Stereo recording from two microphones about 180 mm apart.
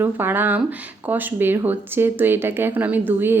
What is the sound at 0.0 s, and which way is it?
A woman's voice, 10° right (ahead or behind).